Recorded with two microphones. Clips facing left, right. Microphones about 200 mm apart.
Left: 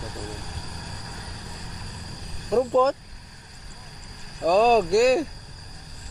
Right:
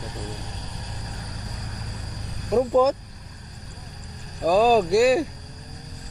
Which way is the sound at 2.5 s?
5° right (ahead or behind).